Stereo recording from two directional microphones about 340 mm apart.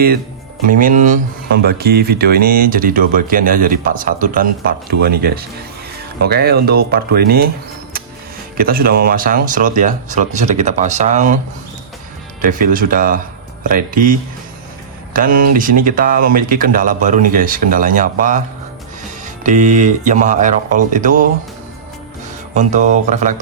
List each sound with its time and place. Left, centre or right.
0.7 s speech: right
8.5 s speech: right
12.4 s speech: right
22.5 s speech: right